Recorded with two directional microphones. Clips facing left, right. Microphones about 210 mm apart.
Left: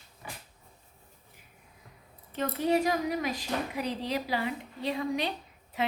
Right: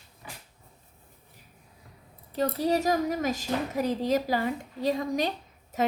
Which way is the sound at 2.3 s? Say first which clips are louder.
Right 1 dB; 35° right (ahead or behind).